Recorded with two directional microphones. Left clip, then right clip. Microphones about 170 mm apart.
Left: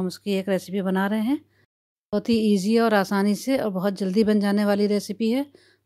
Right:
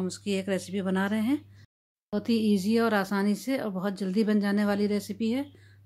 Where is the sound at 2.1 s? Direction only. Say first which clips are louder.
Left 5 dB; 50° left (ahead or behind).